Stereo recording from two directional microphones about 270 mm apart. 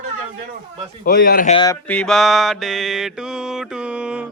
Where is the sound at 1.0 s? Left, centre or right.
Left.